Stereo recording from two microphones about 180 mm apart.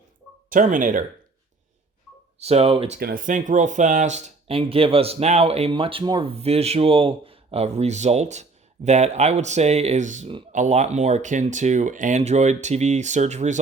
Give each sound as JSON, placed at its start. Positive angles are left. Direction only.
{"t": 0.5, "sound": "speech", "side_deg": -50}
{"t": 2.4, "sound": "speech", "side_deg": -35}
{"t": 3.0, "sound": "speech", "side_deg": -50}